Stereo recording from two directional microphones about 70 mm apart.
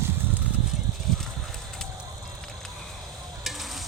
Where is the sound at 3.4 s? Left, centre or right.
Centre.